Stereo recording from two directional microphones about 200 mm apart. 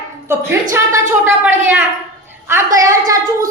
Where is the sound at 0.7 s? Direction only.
10° right (ahead or behind).